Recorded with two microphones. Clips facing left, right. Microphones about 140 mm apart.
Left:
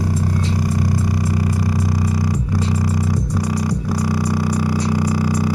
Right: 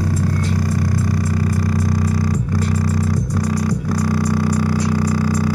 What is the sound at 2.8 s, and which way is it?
Music, 10° left (ahead or behind).